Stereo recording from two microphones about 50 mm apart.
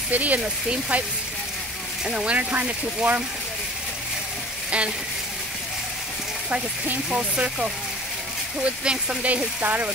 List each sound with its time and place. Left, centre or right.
0.1 s speech: right
2.0 s speech: centre
2.3 s speech: right
4.6 s frying: right
7.1 s speech: right
9.2 s speech: right